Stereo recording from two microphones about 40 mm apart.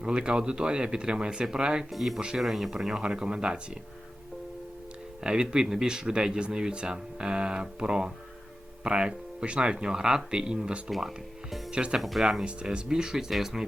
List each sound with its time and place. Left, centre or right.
0.0 s speech: right
1.9 s speech: centre; by 3.6 s right
5.2 s speech: right
11.9 s speech: centre